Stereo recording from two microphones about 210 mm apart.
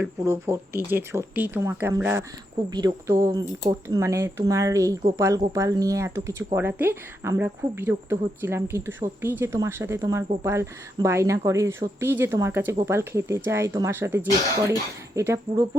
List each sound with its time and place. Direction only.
0.0 s speech: 10° right (ahead or behind)